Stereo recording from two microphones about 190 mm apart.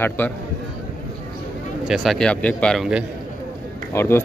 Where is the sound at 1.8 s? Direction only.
Centre (ahead or behind).